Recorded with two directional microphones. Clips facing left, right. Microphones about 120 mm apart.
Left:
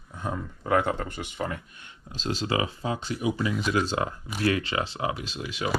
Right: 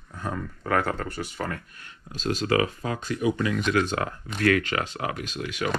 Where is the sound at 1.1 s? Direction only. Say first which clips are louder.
Right 3 dB; 40° right (ahead or behind).